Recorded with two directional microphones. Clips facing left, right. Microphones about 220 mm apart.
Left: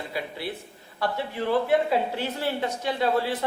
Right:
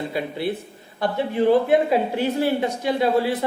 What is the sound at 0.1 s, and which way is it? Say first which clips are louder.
Speech: right 7 dB; 20° right (ahead or behind).